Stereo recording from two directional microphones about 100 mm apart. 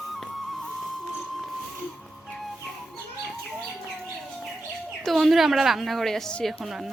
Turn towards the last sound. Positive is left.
turn(degrees=-5)  # may be behind; listen again after turning